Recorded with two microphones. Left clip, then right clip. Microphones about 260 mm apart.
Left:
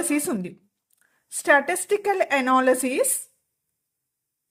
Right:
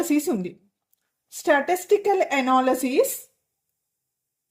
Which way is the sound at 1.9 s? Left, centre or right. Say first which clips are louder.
Right 1 dB; left.